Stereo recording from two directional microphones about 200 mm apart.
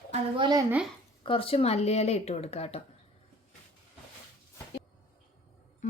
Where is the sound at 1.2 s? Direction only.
25° left (ahead or behind).